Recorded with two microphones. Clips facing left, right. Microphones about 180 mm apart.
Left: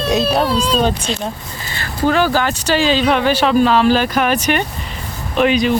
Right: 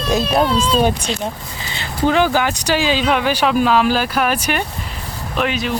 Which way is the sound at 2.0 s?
15° right (ahead or behind).